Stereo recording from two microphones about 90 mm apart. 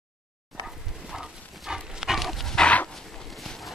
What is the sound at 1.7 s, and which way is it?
Dog, 5° right (ahead or behind).